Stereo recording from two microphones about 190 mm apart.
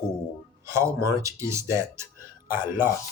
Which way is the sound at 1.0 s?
15° right (ahead or behind).